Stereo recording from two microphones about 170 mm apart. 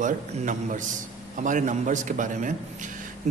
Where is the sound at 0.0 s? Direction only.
45° right (ahead or behind).